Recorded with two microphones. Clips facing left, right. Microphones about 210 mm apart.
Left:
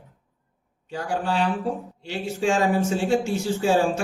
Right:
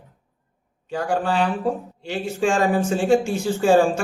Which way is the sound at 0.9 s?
55° right (ahead or behind).